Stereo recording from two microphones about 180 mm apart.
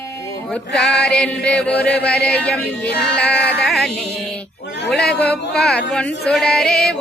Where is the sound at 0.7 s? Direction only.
5° left (ahead or behind).